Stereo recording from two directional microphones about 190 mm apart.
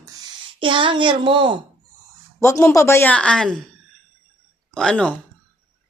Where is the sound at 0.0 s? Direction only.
20° right (ahead or behind).